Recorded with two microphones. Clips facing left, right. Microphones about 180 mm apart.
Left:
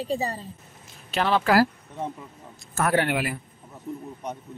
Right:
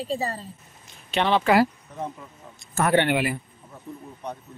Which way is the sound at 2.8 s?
Centre (ahead or behind).